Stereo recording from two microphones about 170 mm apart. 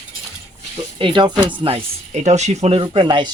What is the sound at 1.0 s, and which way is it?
Speech, 25° right (ahead or behind).